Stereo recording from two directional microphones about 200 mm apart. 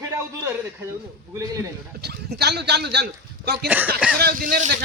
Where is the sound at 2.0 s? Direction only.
55° right (ahead or behind).